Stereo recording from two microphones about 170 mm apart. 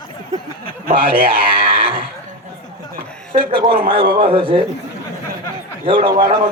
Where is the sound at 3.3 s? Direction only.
60° right (ahead or behind).